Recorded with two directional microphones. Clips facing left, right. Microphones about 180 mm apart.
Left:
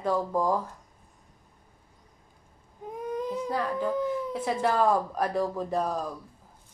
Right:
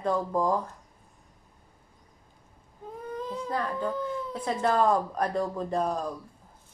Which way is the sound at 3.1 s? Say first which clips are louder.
Left 2 dB; 15° left (ahead or behind).